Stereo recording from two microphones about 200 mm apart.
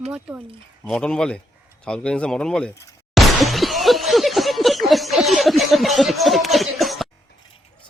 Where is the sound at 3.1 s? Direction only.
Centre (ahead or behind).